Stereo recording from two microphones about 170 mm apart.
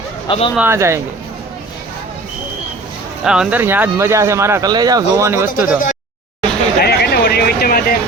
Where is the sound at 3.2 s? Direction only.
5° right (ahead or behind).